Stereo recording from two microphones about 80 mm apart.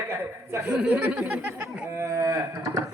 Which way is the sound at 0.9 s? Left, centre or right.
Centre.